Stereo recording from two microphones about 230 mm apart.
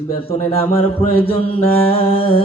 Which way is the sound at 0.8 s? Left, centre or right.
Left.